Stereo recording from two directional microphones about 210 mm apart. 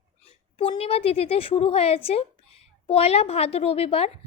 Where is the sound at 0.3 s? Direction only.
25° left (ahead or behind).